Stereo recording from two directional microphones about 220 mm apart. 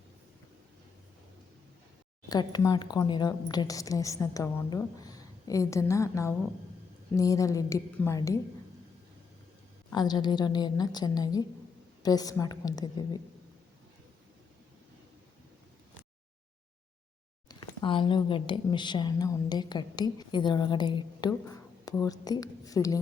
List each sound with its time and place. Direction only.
2.3 s a woman's voice: 20° left (ahead or behind)
9.9 s a woman's voice: 20° left (ahead or behind)
17.5 s speech: 20° left (ahead or behind)